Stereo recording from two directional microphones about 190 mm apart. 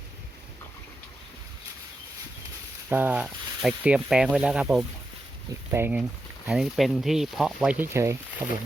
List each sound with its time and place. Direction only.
2.9 s speech: 10° right (ahead or behind)